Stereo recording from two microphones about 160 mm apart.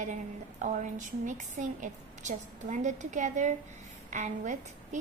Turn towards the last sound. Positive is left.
turn(degrees=-50)  # may be behind; listen again after turning